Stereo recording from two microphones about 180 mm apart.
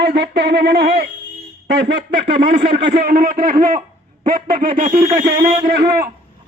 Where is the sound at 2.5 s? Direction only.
60° right (ahead or behind).